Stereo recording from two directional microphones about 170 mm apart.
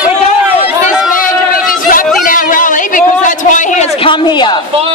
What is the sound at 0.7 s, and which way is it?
Chatter, 5° right (ahead or behind).